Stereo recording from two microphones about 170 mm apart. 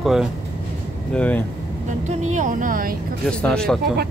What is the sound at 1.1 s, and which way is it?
Speech, 10° left (ahead or behind).